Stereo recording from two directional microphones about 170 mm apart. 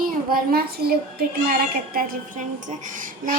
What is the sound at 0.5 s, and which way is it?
Child singing, 65° right (ahead or behind).